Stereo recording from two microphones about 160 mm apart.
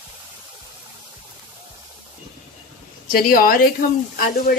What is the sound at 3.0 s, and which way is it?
Speech, 65° left (ahead or behind).